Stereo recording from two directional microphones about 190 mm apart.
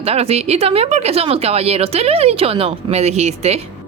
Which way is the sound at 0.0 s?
30° right (ahead or behind).